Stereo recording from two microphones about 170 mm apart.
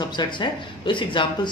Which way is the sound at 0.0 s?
25° left (ahead or behind).